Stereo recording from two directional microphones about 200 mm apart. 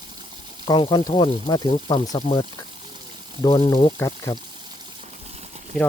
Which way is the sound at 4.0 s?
20° left (ahead or behind).